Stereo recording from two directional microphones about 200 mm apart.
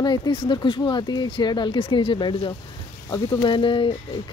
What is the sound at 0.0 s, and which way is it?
Speech, 20° left (ahead or behind).